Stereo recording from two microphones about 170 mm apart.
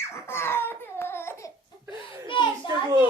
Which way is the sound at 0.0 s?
15° left (ahead or behind).